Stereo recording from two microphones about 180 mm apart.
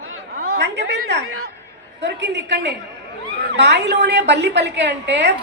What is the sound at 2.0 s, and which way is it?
A woman's voice, 75° right (ahead or behind).